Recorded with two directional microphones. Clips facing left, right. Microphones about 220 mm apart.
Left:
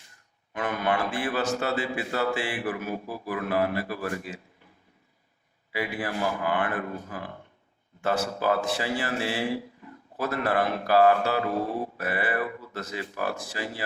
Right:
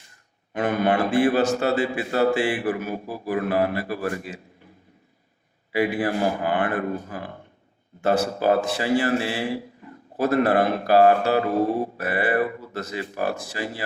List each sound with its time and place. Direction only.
0.5 s speech: 35° right (ahead or behind)
1.3 s a man's voice: 25° right (ahead or behind)
1.5 s speech: 40° right (ahead or behind)
2.6 s a man's voice: 35° right (ahead or behind)
6.0 s speech: 45° right (ahead or behind)
10.6 s speech: 35° right (ahead or behind)